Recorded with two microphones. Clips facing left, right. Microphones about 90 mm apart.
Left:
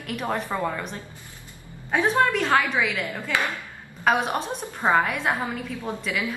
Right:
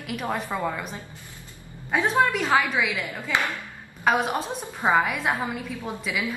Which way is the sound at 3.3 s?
20° right (ahead or behind).